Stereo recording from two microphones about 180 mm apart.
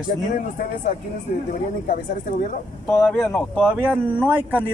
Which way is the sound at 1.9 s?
50° left (ahead or behind).